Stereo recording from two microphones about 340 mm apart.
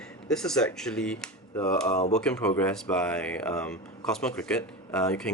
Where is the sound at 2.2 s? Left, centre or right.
Centre.